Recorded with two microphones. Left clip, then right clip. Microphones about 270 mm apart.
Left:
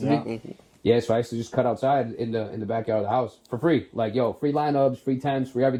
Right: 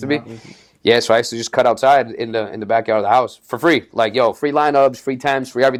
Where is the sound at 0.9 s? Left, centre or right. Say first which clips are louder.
Right 8 dB; centre.